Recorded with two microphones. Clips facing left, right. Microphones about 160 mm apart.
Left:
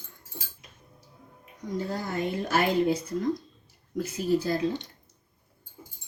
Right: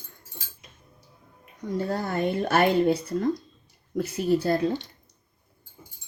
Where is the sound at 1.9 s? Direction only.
60° right (ahead or behind).